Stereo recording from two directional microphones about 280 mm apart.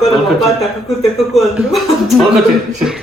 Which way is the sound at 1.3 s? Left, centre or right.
Centre.